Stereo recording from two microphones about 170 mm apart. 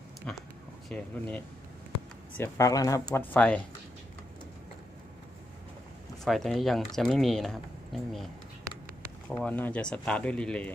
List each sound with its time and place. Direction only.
0.8 s speech: 10° left (ahead or behind)
3.3 s speech: 5° left (ahead or behind)
6.2 s speech: centre (ahead or behind)
9.3 s speech: 10° left (ahead or behind)